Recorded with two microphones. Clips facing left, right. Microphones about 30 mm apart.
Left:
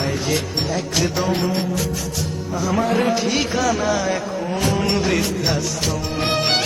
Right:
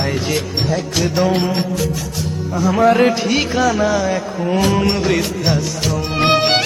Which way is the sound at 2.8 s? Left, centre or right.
Right.